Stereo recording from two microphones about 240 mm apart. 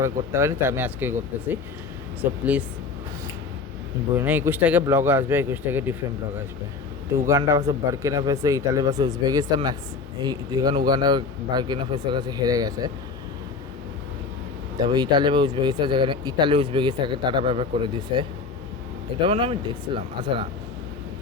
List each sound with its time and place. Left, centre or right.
0.0 s speech: centre
2.4 s speech: centre
4.2 s speech: centre
7.3 s speech: centre
14.8 s speech: centre